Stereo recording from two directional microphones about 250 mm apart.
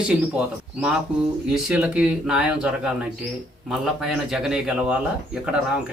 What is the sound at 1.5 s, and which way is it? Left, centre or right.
A man's voice, centre.